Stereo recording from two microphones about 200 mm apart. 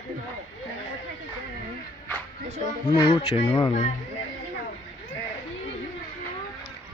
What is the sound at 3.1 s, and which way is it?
Speech, 30° left (ahead or behind).